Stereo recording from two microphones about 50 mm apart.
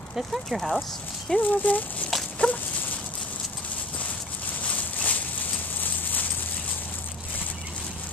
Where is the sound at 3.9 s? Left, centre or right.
Left.